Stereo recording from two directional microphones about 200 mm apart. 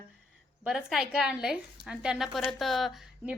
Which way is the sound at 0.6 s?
5° right (ahead or behind).